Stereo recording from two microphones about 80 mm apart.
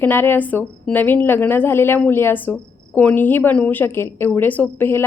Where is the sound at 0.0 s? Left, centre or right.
Left.